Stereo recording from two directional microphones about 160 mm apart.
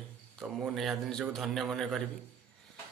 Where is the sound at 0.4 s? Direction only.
Centre (ahead or behind).